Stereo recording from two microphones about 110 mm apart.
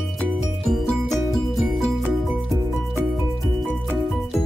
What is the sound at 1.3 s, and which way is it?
Music, centre (ahead or behind).